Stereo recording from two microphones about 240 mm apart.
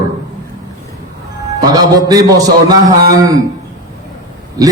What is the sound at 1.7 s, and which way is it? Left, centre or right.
A man's voice, centre.